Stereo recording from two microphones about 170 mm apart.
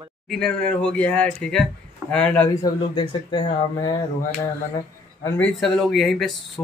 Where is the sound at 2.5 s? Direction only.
25° left (ahead or behind).